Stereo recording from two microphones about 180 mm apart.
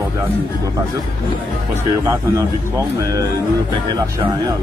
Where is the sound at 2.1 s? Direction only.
15° right (ahead or behind).